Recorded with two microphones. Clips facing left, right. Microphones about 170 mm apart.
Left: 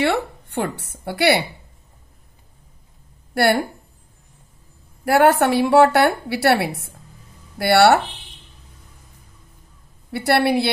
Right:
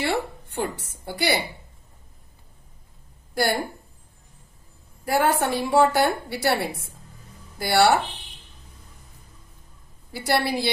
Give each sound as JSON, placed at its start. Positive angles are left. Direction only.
{"t": 0.0, "sound": "speech", "side_deg": 65}
{"t": 5.0, "sound": "a woman's voice", "side_deg": 70}
{"t": 10.1, "sound": "a woman's voice", "side_deg": 65}